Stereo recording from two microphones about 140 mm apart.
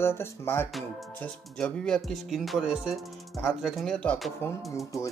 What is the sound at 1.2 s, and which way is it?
Music, 5° left (ahead or behind).